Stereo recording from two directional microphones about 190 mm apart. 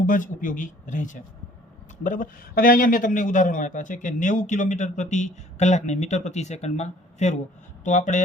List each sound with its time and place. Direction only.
0.0 s a man's voice: 45° left (ahead or behind)